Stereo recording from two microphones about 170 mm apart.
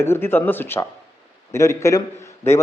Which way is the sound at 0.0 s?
15° left (ahead or behind).